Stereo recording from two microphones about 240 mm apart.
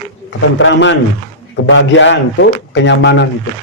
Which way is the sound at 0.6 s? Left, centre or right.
Left.